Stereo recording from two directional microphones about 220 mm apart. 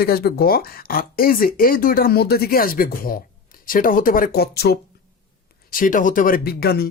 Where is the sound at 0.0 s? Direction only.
45° left (ahead or behind).